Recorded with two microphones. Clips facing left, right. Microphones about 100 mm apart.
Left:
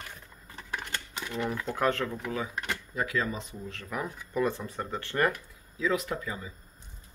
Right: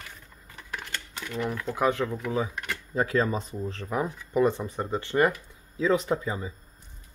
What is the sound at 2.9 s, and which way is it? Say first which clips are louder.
Speech: right 7 dB; 35° right (ahead or behind).